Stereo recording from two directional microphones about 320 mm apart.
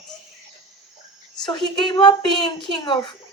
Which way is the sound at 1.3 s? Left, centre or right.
Centre.